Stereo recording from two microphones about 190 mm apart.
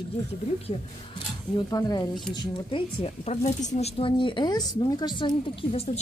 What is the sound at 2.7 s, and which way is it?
Speech, 35° left (ahead or behind).